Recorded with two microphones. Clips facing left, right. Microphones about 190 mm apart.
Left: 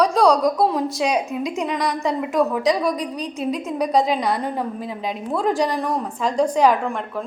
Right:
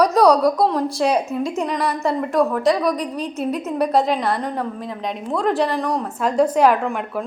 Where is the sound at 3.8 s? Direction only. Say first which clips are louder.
Right 1 dB; centre (ahead or behind).